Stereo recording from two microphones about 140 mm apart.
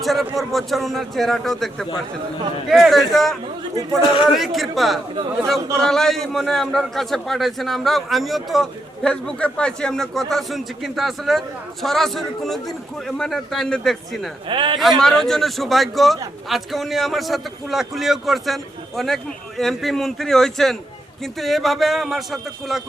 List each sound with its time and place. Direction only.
0.0 s a man's voice: centre (ahead or behind)
4.0 s a man's voice: 35° left (ahead or behind)
4.4 s a man's voice: centre (ahead or behind)
14.4 s speech: 35° right (ahead or behind)
14.8 s a man's voice: centre (ahead or behind)